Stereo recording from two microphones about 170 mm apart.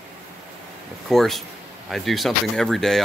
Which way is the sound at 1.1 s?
Centre (ahead or behind).